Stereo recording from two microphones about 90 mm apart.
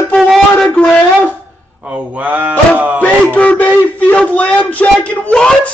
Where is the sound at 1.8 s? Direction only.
15° right (ahead or behind).